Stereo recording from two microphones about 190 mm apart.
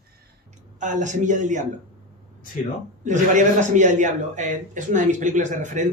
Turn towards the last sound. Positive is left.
turn(degrees=-40)  # may be behind; listen again after turning